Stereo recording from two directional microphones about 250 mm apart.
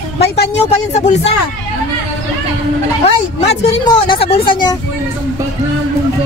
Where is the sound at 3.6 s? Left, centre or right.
Left.